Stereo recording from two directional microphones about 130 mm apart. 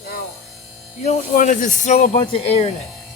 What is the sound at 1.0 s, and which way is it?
Speech, 75° left (ahead or behind).